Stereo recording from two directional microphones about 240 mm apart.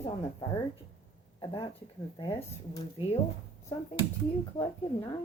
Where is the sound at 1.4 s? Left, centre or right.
Left.